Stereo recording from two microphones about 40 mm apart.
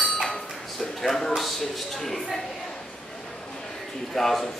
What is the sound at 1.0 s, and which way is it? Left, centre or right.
Speech, centre.